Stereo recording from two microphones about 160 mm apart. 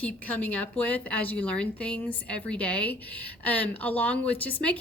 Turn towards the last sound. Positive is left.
turn(degrees=10)  # may be behind; listen again after turning